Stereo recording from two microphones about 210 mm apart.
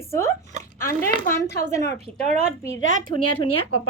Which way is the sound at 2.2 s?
30° right (ahead or behind).